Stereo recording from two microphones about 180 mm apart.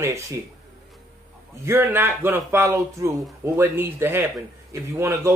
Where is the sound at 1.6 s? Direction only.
15° right (ahead or behind).